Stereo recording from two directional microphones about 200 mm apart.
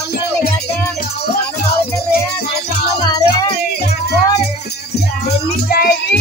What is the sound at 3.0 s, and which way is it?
Music, 20° left (ahead or behind).